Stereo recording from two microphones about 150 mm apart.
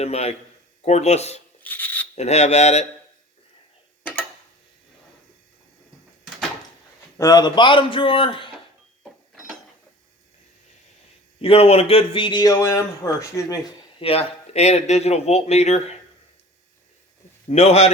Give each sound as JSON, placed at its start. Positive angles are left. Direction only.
{"t": 0.0, "sound": "speech", "side_deg": 45}
{"t": 1.6, "sound": "rub", "side_deg": 10}
{"t": 2.1, "sound": "speech", "side_deg": 50}
{"t": 4.0, "sound": "tick-tock", "side_deg": 10}
{"t": 7.2, "sound": "speech", "side_deg": 25}
{"t": 11.3, "sound": "speech", "side_deg": 40}
{"t": 14.0, "sound": "speech", "side_deg": 40}
{"t": 17.5, "sound": "speech", "side_deg": 45}